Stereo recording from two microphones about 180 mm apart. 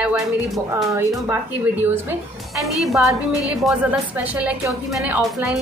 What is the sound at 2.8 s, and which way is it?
A woman's voice, centre (ahead or behind).